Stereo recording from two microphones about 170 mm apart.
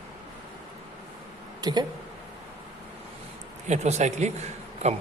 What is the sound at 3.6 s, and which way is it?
A man's voice, 40° right (ahead or behind).